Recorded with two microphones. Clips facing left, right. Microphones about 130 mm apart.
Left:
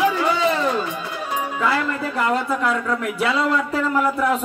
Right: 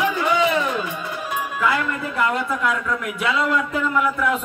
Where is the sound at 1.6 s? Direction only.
35° left (ahead or behind).